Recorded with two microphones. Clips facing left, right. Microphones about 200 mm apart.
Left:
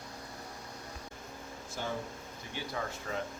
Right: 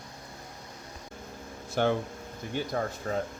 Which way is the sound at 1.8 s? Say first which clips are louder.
Right 13 dB; 70° right (ahead or behind).